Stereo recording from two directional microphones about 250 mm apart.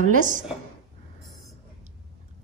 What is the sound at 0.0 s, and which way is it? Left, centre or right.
Speech, right.